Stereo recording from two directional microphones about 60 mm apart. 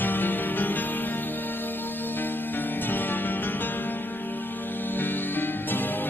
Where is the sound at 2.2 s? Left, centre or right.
Left.